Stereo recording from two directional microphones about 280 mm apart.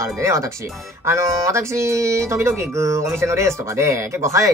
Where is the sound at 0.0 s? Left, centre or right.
Centre.